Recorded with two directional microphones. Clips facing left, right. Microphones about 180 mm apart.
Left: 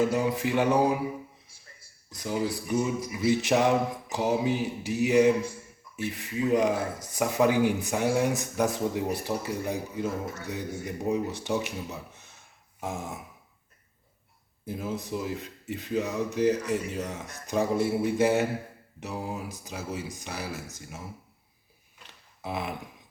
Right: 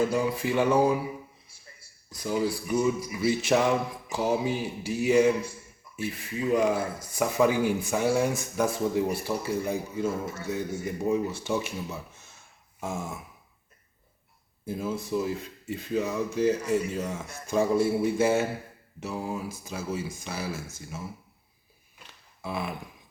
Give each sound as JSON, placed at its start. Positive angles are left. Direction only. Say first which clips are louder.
{"t": 0.1, "sound": "speech", "louder": "even", "side_deg": 20}
{"t": 2.0, "sound": "speech", "louder": "right 2 dB", "side_deg": 20}
{"t": 14.6, "sound": "speech", "louder": "right 2 dB", "side_deg": 15}
{"t": 22.4, "sound": "speech", "louder": "even", "side_deg": 20}